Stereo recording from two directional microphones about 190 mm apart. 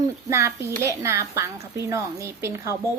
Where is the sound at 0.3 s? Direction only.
15° right (ahead or behind).